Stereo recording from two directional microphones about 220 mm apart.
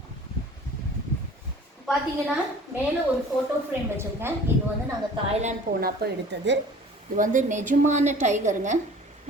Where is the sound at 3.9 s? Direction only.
10° right (ahead or behind).